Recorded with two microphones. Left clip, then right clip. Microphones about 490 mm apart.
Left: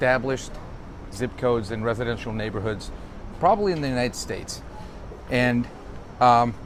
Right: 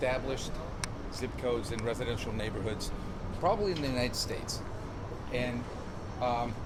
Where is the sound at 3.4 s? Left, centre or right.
Left.